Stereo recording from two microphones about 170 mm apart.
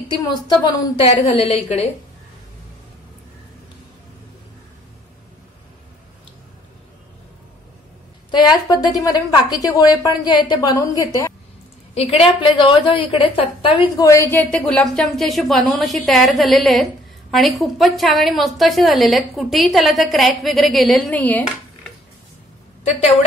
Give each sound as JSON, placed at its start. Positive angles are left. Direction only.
{"t": 0.2, "sound": "a woman's voice", "side_deg": 20}
{"t": 1.0, "sound": "a woman's voice", "side_deg": 35}
{"t": 8.3, "sound": "a woman's voice", "side_deg": 25}
{"t": 11.9, "sound": "a woman's voice", "side_deg": 35}
{"t": 14.0, "sound": "speech", "side_deg": 15}